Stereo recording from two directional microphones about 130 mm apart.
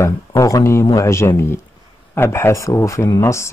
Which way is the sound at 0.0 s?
25° left (ahead or behind).